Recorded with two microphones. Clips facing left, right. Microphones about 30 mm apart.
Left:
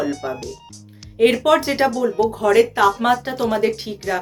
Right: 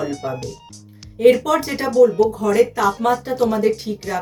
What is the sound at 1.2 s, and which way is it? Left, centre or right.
Speech, left.